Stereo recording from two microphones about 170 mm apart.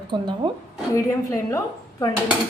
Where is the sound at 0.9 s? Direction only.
15° left (ahead or behind).